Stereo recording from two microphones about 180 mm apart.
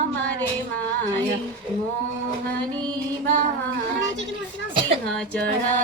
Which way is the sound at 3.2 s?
50° right (ahead or behind).